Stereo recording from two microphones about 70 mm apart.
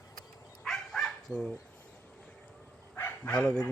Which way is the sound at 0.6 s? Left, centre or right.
Centre.